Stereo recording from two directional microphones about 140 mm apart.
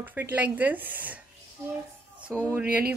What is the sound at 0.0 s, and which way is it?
A woman's voice, 15° right (ahead or behind).